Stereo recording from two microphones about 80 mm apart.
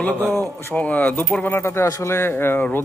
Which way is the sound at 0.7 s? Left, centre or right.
Centre.